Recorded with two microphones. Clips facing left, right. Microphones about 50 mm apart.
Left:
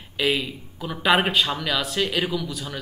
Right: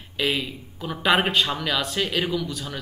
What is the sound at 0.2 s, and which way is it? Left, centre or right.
Speech, centre.